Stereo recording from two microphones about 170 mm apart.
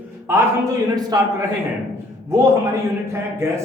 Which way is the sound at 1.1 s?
25° right (ahead or behind).